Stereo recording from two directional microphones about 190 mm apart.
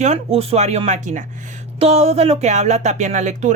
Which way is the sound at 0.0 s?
35° right (ahead or behind).